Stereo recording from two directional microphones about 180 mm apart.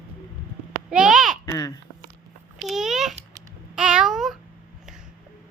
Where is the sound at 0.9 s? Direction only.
5° right (ahead or behind).